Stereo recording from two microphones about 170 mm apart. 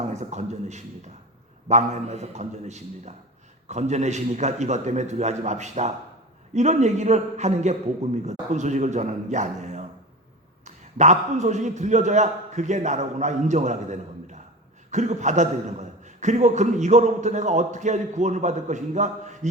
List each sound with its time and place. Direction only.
0.0 s a man's voice: 40° right (ahead or behind)